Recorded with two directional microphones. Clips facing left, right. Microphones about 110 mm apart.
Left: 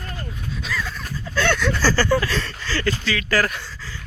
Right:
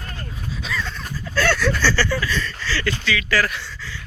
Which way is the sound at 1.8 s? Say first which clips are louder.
Left 6 dB; 40° left (ahead or behind).